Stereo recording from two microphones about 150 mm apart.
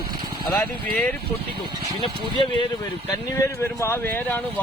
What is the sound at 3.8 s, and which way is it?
Speech, 15° left (ahead or behind).